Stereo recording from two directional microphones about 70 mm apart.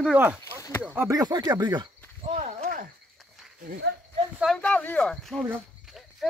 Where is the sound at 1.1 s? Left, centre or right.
Right.